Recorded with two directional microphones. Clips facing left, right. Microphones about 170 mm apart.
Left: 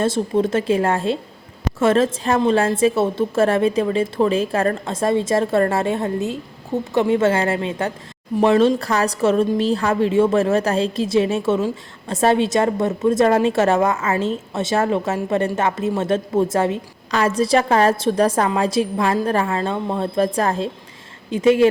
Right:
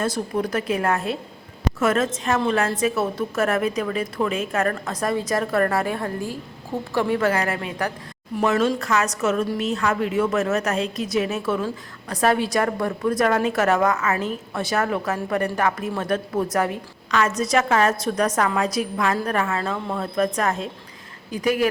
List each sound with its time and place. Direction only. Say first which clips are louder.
0.0 s a woman's voice: left 5 dB; 25° left (ahead or behind)